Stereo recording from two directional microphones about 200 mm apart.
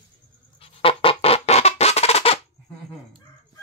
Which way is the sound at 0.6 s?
25° left (ahead or behind).